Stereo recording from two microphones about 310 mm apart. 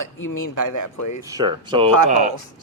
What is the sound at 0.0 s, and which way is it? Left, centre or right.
Speech, left.